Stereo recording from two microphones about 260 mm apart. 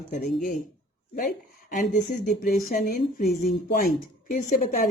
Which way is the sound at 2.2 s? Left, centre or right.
Left.